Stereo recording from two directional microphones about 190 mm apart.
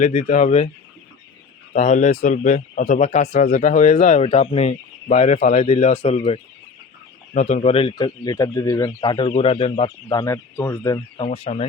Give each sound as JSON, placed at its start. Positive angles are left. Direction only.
{"t": 0.0, "sound": "speech", "side_deg": 35}
{"t": 1.7, "sound": "speech", "side_deg": 40}
{"t": 11.2, "sound": "speech", "side_deg": 30}